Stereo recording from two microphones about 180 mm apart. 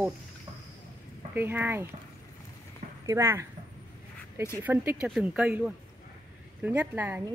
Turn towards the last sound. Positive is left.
turn(degrees=-10)  # may be behind; listen again after turning